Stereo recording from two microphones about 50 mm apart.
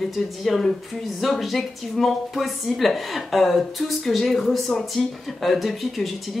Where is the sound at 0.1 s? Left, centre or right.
Centre.